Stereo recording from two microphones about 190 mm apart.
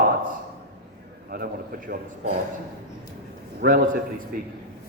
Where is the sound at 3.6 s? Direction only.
50° right (ahead or behind).